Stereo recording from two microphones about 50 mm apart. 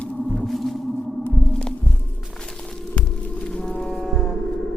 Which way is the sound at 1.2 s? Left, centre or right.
Left.